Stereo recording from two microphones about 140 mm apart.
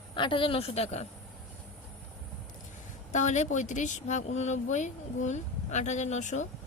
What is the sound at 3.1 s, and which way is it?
A woman's voice, 60° left (ahead or behind).